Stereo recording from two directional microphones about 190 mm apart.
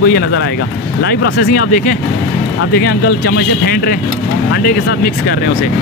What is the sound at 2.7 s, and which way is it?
Speech, 60° left (ahead or behind).